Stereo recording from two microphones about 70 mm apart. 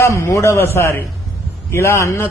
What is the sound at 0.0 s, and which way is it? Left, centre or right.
A man's voice, left.